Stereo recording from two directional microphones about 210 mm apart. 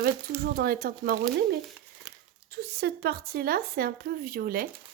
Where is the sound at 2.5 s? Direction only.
50° right (ahead or behind).